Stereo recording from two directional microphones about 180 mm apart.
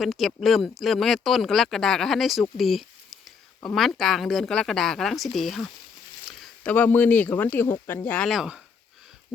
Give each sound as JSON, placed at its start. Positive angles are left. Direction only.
{"t": 0.0, "sound": "speech", "side_deg": 0}